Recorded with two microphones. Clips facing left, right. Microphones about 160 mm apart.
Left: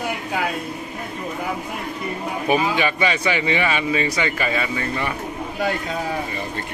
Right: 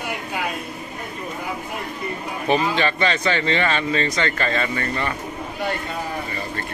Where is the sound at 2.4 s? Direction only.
10° left (ahead or behind).